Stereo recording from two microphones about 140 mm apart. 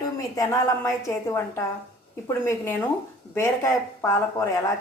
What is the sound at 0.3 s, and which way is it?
A woman's voice, 25° left (ahead or behind).